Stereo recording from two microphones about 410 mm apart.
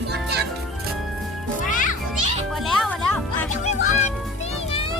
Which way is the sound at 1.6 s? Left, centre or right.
Centre.